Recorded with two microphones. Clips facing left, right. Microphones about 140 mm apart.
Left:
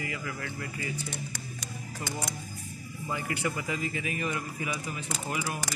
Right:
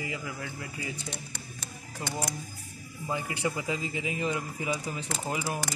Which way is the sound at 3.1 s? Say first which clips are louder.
Right 1 dB; 20° right (ahead or behind).